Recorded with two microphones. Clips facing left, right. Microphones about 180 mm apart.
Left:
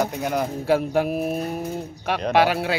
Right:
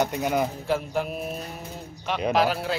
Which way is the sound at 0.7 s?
70° left (ahead or behind).